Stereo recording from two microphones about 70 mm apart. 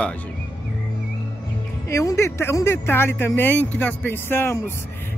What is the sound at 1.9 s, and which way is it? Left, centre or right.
Speech, left.